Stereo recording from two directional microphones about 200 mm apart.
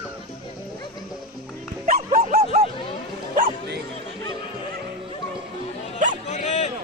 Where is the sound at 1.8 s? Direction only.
40° right (ahead or behind).